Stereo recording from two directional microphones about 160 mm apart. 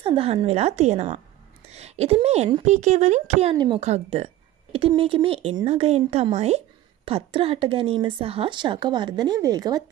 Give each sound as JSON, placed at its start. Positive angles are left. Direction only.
{"t": 0.0, "sound": "speech", "side_deg": -35}
{"t": 3.5, "sound": "speech", "side_deg": -25}
{"t": 3.8, "sound": "speech", "side_deg": -40}